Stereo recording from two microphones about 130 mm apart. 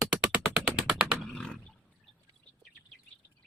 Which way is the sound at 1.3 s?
5° left (ahead or behind).